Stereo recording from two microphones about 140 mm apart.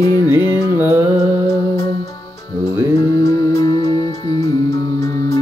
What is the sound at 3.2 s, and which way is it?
Music, 25° left (ahead or behind).